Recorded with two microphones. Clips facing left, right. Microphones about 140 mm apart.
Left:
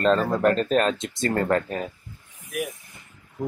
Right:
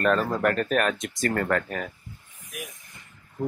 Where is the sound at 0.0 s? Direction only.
25° left (ahead or behind).